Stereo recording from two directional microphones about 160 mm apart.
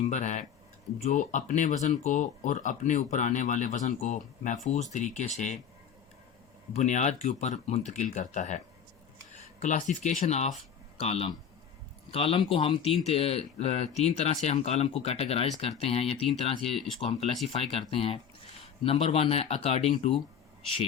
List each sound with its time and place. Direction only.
0.1 s speech: 50° left (ahead or behind)
6.7 s speech: 45° left (ahead or behind)